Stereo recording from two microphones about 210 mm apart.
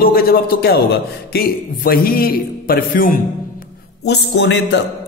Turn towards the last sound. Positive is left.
turn(degrees=60)  # may be behind; listen again after turning